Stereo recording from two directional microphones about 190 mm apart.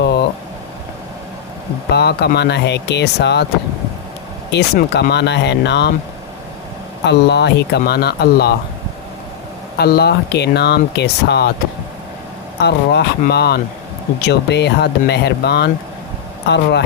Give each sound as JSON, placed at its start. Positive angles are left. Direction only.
{"t": 0.0, "sound": "a sound", "side_deg": 55}
{"t": 1.9, "sound": "speech", "side_deg": 60}
{"t": 4.5, "sound": "speech", "side_deg": 60}
{"t": 7.0, "sound": "speech", "side_deg": 65}
{"t": 9.7, "sound": "speech", "side_deg": 55}
{"t": 12.5, "sound": "speech", "side_deg": 60}